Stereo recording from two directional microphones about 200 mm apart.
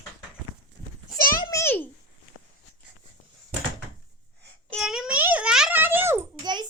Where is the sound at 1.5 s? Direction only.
15° left (ahead or behind).